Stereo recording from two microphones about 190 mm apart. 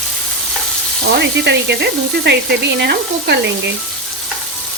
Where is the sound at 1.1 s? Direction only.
60° right (ahead or behind).